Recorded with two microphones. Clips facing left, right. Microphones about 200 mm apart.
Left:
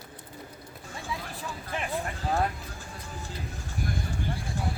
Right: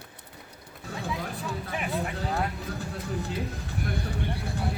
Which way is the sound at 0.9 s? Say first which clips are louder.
Right 4 dB; 60° right (ahead or behind).